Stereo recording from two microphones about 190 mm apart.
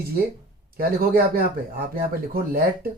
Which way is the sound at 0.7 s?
50° right (ahead or behind).